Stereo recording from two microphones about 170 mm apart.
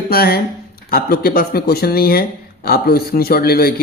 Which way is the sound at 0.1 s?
65° left (ahead or behind).